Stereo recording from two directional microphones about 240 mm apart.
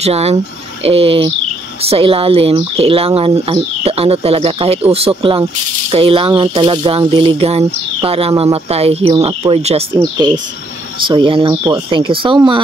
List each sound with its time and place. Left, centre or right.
0.0 s speech: right